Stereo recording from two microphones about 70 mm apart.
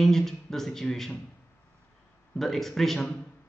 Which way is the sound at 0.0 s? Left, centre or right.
Centre.